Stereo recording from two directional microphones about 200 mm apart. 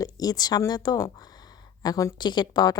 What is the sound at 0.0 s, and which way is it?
A woman's voice, 20° left (ahead or behind).